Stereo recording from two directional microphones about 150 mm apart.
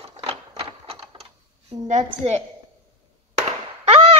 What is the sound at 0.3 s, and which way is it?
Typewriter, 45° right (ahead or behind).